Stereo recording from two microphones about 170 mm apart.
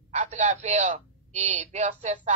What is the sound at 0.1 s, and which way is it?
A man's voice, 45° right (ahead or behind).